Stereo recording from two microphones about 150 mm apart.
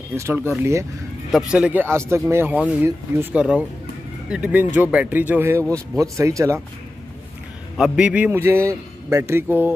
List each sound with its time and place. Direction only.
0.1 s speech: 15° right (ahead or behind)
7.7 s speech: 5° right (ahead or behind)